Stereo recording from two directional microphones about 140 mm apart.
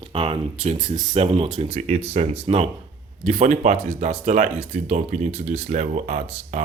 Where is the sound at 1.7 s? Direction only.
60° right (ahead or behind).